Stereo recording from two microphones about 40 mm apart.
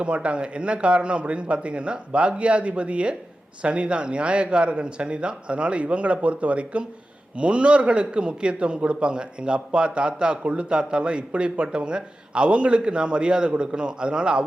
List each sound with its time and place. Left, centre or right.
0.0 s a man's voice: right